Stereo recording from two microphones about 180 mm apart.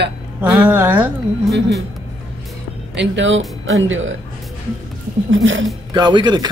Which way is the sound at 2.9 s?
90° right.